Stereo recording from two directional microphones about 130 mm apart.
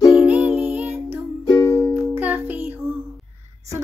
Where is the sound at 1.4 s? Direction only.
25° left (ahead or behind).